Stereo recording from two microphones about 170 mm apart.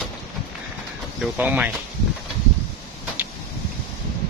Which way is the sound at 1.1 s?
10° right (ahead or behind).